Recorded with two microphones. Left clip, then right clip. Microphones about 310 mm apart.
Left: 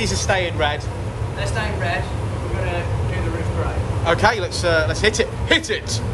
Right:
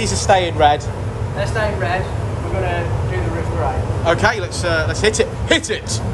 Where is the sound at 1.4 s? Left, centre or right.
Right.